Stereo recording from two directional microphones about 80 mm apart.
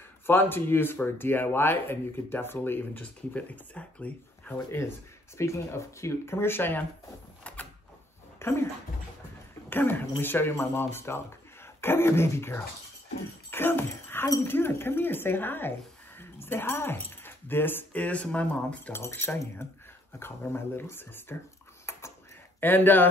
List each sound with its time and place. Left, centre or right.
0.3 s speech: left
5.4 s speech: left
7.5 s door: centre
8.4 s speech: left
9.7 s speech: left
18.9 s speech: left
21.9 s typing: left
22.6 s speech: left